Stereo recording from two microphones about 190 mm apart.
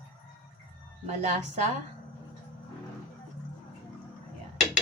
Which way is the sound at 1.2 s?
35° right (ahead or behind).